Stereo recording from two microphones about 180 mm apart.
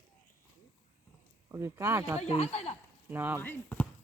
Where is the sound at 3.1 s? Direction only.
10° right (ahead or behind).